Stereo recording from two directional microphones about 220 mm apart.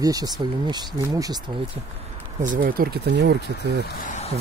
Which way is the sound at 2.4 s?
40° right (ahead or behind).